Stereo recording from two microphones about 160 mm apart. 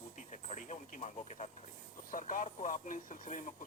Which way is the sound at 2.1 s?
55° left (ahead or behind).